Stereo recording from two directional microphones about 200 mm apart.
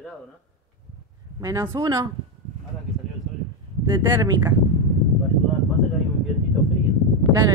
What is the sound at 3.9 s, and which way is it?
Speech, 20° right (ahead or behind).